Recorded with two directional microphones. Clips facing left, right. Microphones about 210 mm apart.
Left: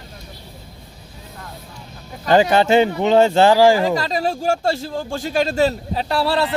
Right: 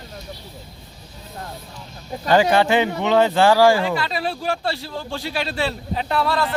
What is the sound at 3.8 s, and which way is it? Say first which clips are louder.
Speech: left 4 dB; 40° left (ahead or behind).